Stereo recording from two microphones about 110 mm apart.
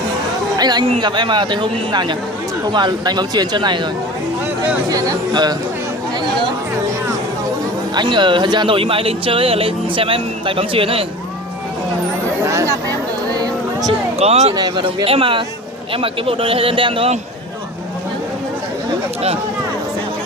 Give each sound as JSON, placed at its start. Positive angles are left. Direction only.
{"t": 0.5, "sound": "speech", "side_deg": -40}
{"t": 4.9, "sound": "speech", "side_deg": -35}
{"t": 7.9, "sound": "speech", "side_deg": -45}
{"t": 12.5, "sound": "a sound", "side_deg": -30}
{"t": 14.2, "sound": "speech", "side_deg": -80}
{"t": 14.5, "sound": "speech", "side_deg": -40}
{"t": 15.0, "sound": "a man's voice", "side_deg": -55}